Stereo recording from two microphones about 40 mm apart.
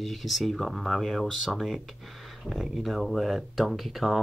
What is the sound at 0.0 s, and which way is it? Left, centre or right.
Speech, centre.